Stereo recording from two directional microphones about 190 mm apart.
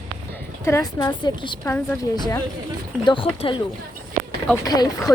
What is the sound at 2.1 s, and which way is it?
A woman's voice, 20° left (ahead or behind).